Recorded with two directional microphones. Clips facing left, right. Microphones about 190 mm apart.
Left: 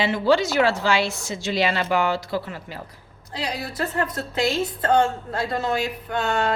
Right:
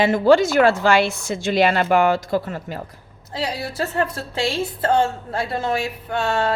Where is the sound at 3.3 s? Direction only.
30° right (ahead or behind).